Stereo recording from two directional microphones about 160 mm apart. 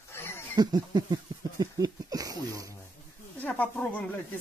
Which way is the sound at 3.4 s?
10° left (ahead or behind).